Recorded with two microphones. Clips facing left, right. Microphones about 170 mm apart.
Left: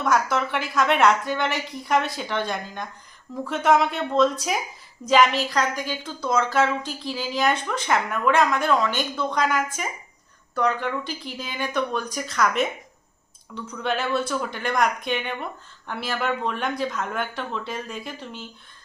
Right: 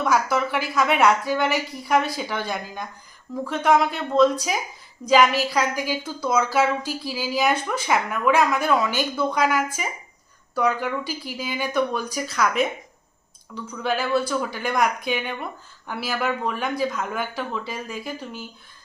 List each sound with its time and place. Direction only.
0.0 s a woman's voice: centre (ahead or behind)